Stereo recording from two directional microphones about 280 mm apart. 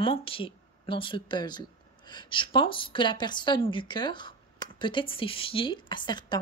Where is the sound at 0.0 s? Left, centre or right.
Centre.